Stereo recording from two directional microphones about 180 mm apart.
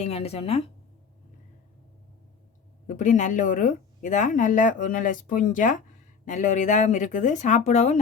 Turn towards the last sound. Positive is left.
turn(degrees=40)  # may be behind; listen again after turning